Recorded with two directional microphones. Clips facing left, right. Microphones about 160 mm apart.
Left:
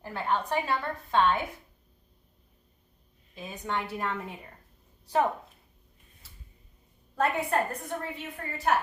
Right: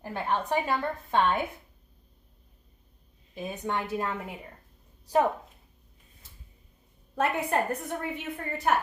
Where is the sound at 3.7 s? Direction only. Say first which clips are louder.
Right 1 dB; 15° right (ahead or behind).